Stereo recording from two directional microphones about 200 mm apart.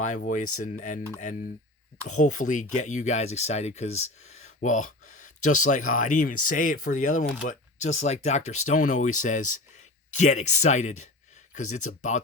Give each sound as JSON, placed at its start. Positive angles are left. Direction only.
{"t": 0.2, "sound": "speech", "side_deg": 40}
{"t": 2.0, "sound": "speech", "side_deg": 40}